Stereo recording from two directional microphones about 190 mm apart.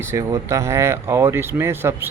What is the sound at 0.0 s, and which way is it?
Speech, 15° right (ahead or behind).